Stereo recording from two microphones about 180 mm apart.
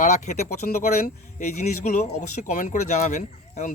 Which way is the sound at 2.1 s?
45° left (ahead or behind).